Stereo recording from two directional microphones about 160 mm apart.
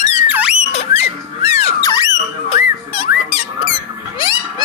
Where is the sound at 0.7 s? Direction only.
40° left (ahead or behind).